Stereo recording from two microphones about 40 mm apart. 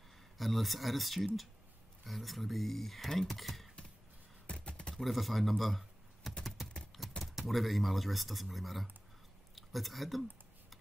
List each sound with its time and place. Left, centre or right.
0.4 s speech: centre
4.5 s a sound: left
4.9 s speech: centre
7.0 s typing: centre
7.3 s speech: centre